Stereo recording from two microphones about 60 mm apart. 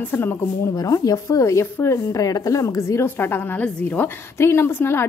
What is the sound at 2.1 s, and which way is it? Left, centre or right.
A woman's voice, left.